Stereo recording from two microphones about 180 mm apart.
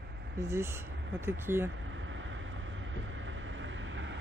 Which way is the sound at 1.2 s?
15° right (ahead or behind).